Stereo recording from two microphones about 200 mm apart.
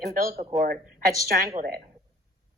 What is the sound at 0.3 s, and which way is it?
Speech, 40° right (ahead or behind).